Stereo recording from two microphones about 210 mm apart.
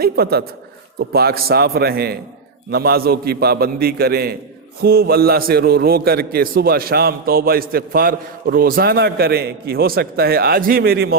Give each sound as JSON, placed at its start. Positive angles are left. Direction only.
{"t": 0.0, "sound": "a man's voice", "side_deg": -50}